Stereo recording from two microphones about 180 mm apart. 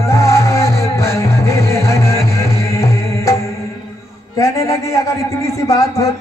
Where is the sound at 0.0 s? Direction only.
15° left (ahead or behind).